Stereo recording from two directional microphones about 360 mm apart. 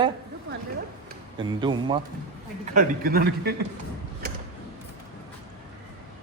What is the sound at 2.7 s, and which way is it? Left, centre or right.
Speech, right.